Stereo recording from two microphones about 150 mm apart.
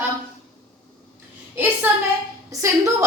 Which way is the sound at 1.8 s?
15° right (ahead or behind).